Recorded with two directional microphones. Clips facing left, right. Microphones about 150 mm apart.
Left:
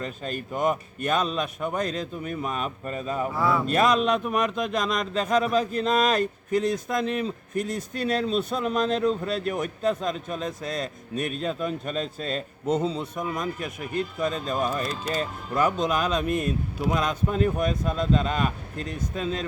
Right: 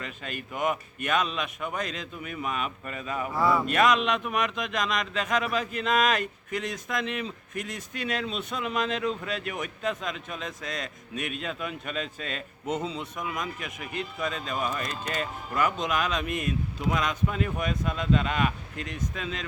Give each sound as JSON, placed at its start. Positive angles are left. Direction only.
{"t": 0.0, "sound": "speech", "side_deg": 35}
{"t": 3.3, "sound": "speech", "side_deg": 0}
{"t": 3.7, "sound": "speech", "side_deg": 35}